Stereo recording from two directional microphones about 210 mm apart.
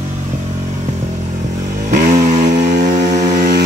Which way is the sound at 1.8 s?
40° right (ahead or behind).